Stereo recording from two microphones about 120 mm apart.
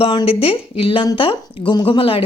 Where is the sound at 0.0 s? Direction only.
45° left (ahead or behind).